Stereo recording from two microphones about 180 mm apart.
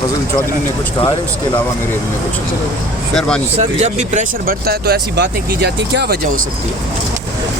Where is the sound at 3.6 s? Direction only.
40° right (ahead or behind); by 6.1 s 65° right (ahead or behind).